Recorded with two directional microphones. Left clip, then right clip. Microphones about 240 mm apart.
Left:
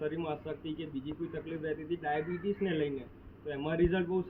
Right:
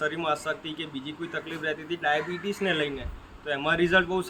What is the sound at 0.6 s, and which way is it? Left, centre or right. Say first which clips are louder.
Speech: right 5 dB; right.